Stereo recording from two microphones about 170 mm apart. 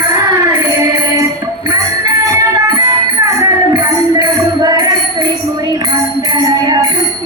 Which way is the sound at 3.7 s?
25° right (ahead or behind).